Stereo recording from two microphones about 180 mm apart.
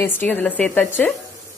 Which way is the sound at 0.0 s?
10° left (ahead or behind).